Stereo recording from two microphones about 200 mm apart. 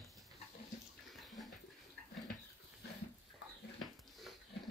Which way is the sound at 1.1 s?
Centre (ahead or behind).